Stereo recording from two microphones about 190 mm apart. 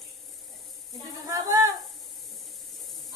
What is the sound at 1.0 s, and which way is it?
Speech, 15° right (ahead or behind).